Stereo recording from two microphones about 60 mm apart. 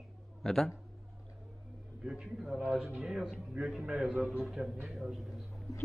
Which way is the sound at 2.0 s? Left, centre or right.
Centre.